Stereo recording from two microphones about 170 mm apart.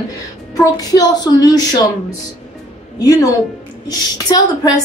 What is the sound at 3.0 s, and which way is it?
A woman's voice, 20° left (ahead or behind).